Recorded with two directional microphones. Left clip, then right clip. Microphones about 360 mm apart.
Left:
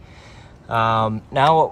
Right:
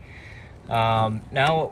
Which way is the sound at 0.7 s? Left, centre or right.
Left.